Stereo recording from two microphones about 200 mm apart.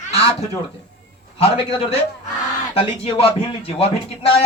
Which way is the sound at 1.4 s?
30° left (ahead or behind).